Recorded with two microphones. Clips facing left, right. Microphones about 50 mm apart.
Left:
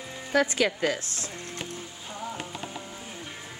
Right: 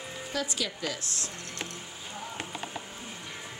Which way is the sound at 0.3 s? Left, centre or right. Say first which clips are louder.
Left 10 dB; left.